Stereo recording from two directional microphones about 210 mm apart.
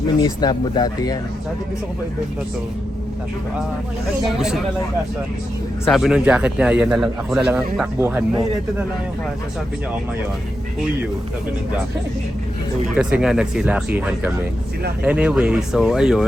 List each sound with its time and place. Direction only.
0.2 s speech: 20° left (ahead or behind)
4.3 s a man's voice: centre (ahead or behind)
5.8 s a man's voice: centre (ahead or behind)
13.0 s a man's voice: 5° right (ahead or behind)